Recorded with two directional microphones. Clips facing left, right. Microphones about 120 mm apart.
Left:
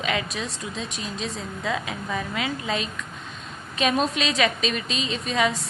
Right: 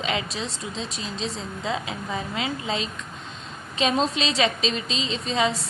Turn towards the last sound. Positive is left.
turn(degrees=-25)  # may be behind; listen again after turning